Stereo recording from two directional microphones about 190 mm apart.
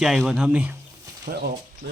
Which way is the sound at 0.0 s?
Centre (ahead or behind).